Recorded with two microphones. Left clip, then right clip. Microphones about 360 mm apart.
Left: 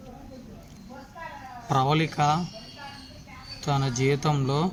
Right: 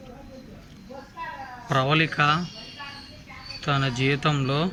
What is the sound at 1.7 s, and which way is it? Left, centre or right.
Speech, centre.